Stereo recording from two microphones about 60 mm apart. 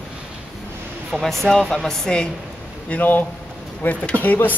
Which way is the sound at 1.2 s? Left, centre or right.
Centre.